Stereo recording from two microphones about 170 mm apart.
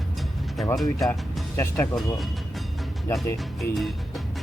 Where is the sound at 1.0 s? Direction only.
Centre (ahead or behind).